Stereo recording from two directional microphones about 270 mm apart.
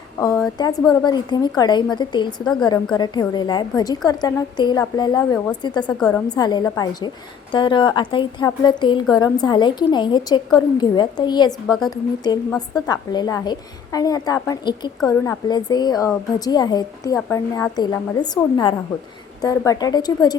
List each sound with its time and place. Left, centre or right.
0.2 s a sound: centre
0.6 s a woman's voice: centre
6.0 s a woman's voice: centre
6.2 s a woman's voice: centre